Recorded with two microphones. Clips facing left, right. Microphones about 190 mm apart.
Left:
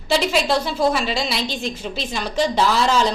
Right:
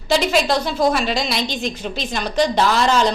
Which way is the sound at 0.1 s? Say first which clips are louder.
Right 1 dB; centre (ahead or behind).